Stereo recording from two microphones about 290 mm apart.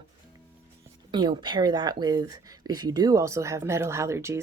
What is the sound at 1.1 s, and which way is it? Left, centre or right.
Speech, centre.